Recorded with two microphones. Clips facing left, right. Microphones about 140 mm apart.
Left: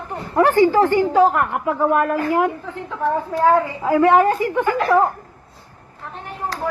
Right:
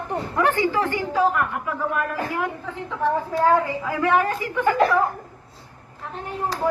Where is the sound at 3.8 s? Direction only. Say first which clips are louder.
Left 7 dB; 40° left (ahead or behind).